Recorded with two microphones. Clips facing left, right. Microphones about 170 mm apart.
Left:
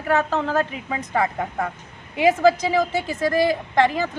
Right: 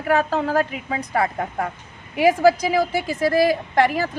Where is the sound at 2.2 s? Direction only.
20° left (ahead or behind).